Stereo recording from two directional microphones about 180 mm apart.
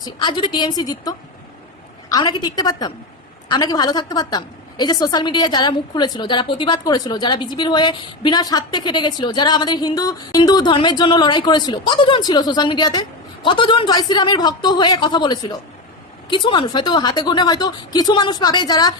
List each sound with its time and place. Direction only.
0.0 s a woman's voice: 25° left (ahead or behind)